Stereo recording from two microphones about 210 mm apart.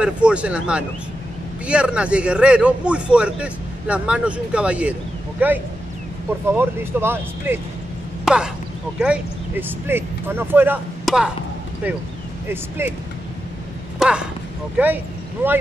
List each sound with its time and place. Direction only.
0.0 s a man's voice: 5° right (ahead or behind)
12.4 s speech: 10° right (ahead or behind)
13.9 s speech: 5° right (ahead or behind)